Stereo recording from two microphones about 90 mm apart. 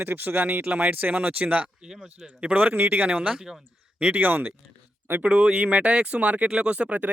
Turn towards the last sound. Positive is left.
turn(degrees=-15)  # may be behind; listen again after turning